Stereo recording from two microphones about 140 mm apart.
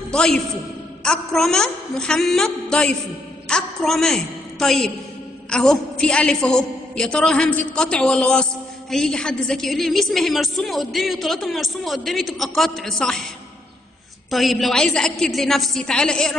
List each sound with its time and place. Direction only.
0.1 s a man's voice: 5° left (ahead or behind)
14.3 s a woman's voice: centre (ahead or behind)